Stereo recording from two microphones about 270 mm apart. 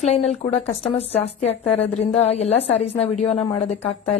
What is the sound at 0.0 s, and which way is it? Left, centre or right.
A woman's voice, left.